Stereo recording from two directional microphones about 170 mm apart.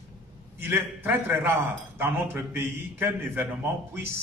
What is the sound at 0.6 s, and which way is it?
A man's voice, 15° right (ahead or behind).